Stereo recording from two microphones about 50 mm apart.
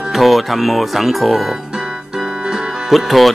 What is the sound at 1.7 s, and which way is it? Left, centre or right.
Keyboard, centre.